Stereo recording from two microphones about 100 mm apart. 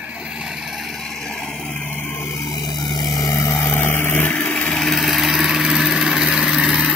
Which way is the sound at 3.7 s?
20° left (ahead or behind).